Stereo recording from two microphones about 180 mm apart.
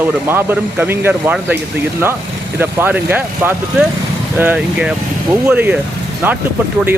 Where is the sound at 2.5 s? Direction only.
10° right (ahead or behind).